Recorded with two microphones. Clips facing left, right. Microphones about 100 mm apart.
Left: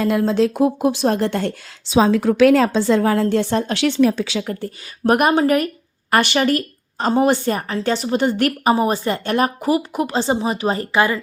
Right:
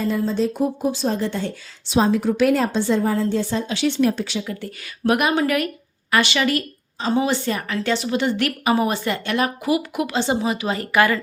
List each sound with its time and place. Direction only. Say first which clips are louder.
0.0 s speech: left 4 dB; 70° left (ahead or behind)
2.0 s a woman's voice: left 6 dB; 90° left
4.4 s a woman's voice: left 4 dB; 45° left (ahead or behind)
6.1 s a woman's voice: left 3 dB; 50° left (ahead or behind)
10.9 s speech: right 1 dB; 25° left (ahead or behind)